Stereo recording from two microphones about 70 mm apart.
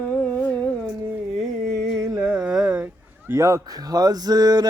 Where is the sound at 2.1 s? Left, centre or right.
Centre.